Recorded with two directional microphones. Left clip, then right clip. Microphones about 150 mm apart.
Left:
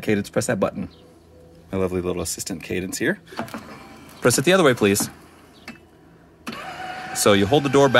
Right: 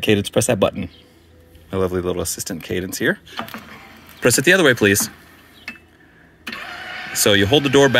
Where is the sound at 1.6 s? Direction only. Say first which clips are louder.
Right 3 dB; 5° left (ahead or behind).